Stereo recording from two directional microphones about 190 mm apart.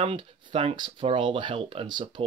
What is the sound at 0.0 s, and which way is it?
Speech, 30° right (ahead or behind).